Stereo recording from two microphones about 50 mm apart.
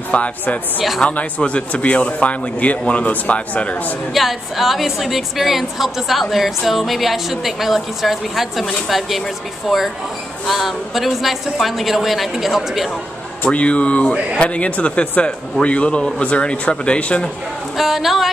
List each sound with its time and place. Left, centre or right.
0.1 s speech: left
4.1 s a woman's voice: centre
13.5 s speech: left
17.7 s a woman's voice: centre